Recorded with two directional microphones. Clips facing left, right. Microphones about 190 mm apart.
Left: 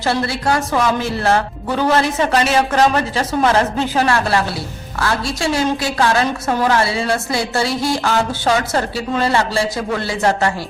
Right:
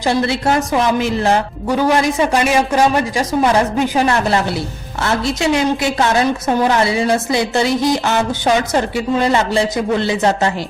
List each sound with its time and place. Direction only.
0.0 s a woman's voice: 20° right (ahead or behind)